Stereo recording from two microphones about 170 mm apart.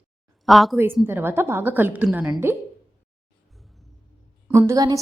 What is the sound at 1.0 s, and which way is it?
A woman's voice, 15° right (ahead or behind).